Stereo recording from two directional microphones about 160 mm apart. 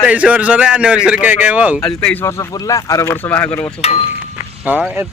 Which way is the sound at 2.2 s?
20° left (ahead or behind).